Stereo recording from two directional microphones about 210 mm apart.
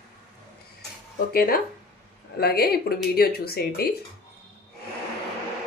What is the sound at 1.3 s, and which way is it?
A woman's voice, 45° left (ahead or behind).